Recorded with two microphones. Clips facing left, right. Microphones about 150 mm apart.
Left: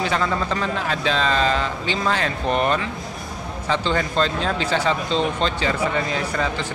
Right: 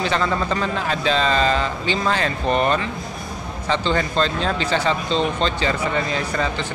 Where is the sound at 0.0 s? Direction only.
5° left (ahead or behind).